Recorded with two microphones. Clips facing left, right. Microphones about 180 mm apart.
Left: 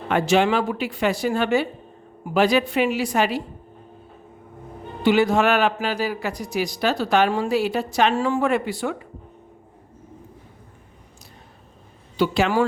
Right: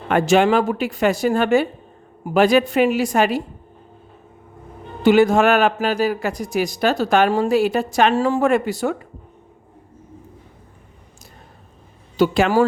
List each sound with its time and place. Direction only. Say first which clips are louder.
0.1 s a man's voice: right 4 dB; 50° right (ahead or behind)
5.0 s a man's voice: right 4 dB; 45° right (ahead or behind)
12.1 s a man's voice: right 4 dB; 45° right (ahead or behind)